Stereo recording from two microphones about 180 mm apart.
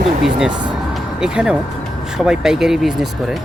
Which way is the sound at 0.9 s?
5° right (ahead or behind).